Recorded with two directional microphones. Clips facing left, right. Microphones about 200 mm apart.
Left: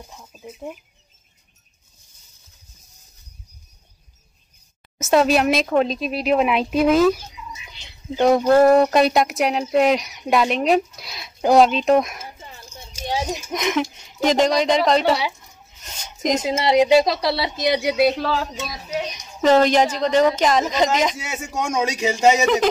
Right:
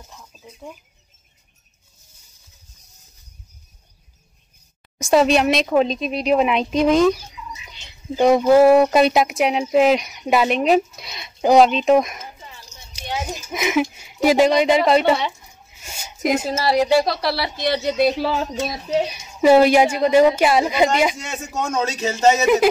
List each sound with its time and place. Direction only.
0.3 s speech: 5° left (ahead or behind)
5.0 s speech: centre (ahead or behind)
8.2 s speech: centre (ahead or behind)
12.4 s a sound: 50° left (ahead or behind)
13.5 s a woman's voice: 5° right (ahead or behind)
15.8 s a sound: 10° right (ahead or behind)
16.4 s speech: 15° left (ahead or behind)
18.0 s a woman's voice: 5° right (ahead or behind)
18.3 s speech: 25° right (ahead or behind)
19.0 s a woman's voice: 10° right (ahead or behind)
21.2 s speech: 10° left (ahead or behind)